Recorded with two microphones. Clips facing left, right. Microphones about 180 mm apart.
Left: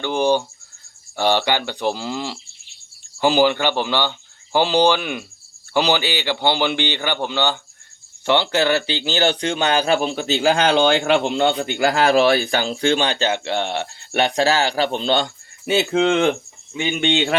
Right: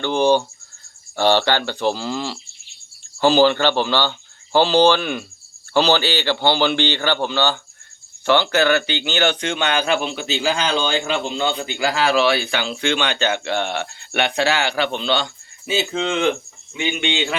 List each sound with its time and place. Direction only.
0.0 s a man's voice: 10° left (ahead or behind); by 16.3 s 55° left (ahead or behind)
16.7 s speech: 45° left (ahead or behind)